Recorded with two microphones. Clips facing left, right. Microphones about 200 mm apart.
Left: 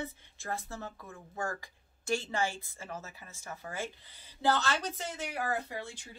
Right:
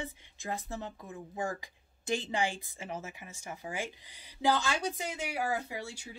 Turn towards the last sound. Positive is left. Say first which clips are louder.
# even
turn(degrees=-10)  # may be behind; listen again after turning